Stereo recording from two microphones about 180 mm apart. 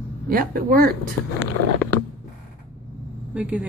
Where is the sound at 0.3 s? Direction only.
55° right (ahead or behind).